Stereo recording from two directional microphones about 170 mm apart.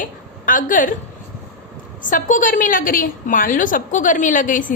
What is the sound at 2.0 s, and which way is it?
A woman's voice, 50° left (ahead or behind).